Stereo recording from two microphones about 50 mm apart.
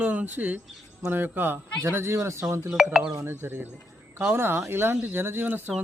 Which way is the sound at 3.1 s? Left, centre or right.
Right.